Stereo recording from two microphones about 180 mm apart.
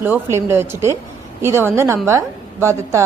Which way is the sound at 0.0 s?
15° right (ahead or behind).